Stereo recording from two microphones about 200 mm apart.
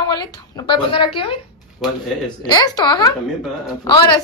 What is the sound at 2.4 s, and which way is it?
Speech, 20° left (ahead or behind).